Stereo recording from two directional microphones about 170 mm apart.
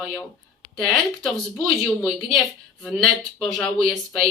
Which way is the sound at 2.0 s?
5° left (ahead or behind).